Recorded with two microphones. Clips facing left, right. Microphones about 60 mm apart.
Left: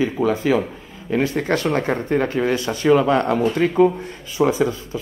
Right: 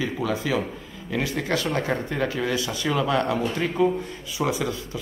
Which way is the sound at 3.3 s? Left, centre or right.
Left.